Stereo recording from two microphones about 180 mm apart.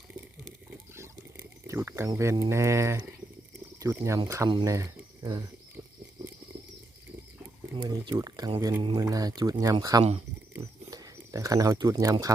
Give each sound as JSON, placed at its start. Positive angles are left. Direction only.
{"t": 0.7, "sound": "a sound", "side_deg": -10}
{"t": 3.8, "sound": "speech", "side_deg": -15}
{"t": 7.8, "sound": "speech", "side_deg": -20}